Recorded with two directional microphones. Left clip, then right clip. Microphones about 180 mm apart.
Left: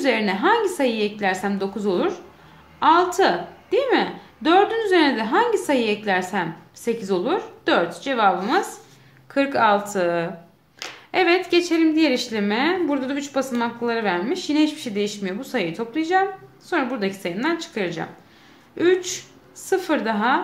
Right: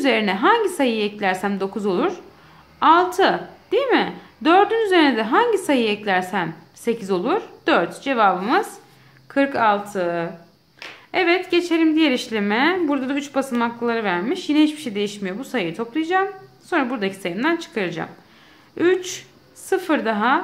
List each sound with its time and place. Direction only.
0.0 s a woman's voice: 20° right (ahead or behind)